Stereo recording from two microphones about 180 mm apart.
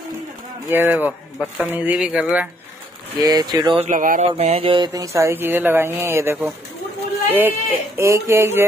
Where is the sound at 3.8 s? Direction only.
45° right (ahead or behind).